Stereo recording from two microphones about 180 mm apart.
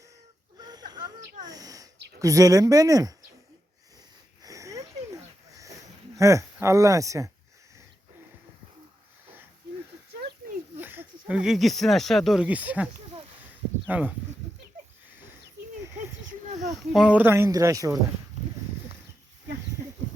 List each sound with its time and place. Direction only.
0.6 s wheeze: 20° right (ahead or behind)
1.5 s owl: 20° right (ahead or behind)
2.1 s speech: 20° right (ahead or behind)
4.4 s sniff: 15° right (ahead or behind)
6.1 s speech: 15° right (ahead or behind)
10.8 s speech: 10° right (ahead or behind)
16.9 s speech: 5° right (ahead or behind)